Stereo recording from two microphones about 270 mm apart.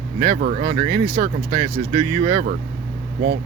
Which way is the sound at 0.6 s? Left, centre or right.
Centre.